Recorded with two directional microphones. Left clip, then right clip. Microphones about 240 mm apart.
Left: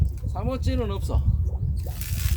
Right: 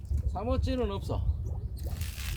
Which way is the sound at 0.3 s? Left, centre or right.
Left.